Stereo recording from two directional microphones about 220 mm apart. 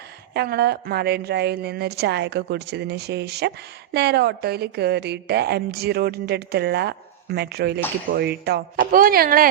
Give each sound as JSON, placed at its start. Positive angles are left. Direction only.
{"t": 0.3, "sound": "a woman's voice", "side_deg": -45}